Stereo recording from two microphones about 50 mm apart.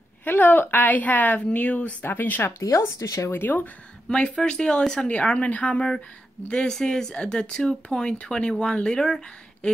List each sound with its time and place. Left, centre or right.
0.2 s a woman's voice: left
2.0 s a woman's voice: left
2.4 s speech: left
3.3 s a woman's voice: left
4.1 s speech: centre